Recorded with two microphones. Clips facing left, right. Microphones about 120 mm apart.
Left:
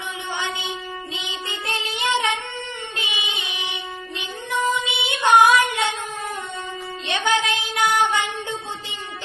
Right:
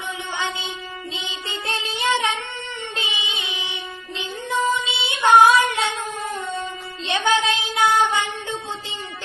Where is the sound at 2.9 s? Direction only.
25° right (ahead or behind).